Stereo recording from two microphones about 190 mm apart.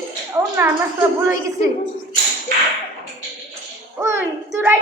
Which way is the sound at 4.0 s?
15° right (ahead or behind).